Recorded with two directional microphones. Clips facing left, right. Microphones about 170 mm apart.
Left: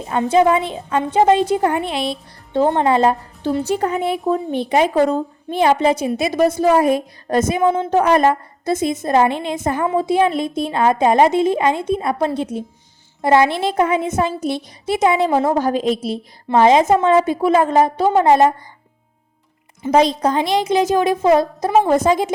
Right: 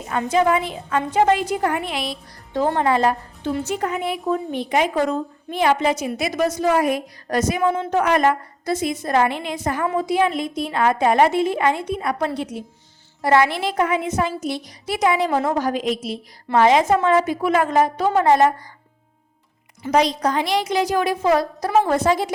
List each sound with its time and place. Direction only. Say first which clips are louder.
0.0 s a woman's voice: left 4 dB; 30° left (ahead or behind)
19.8 s a woman's voice: left 4 dB; 25° left (ahead or behind)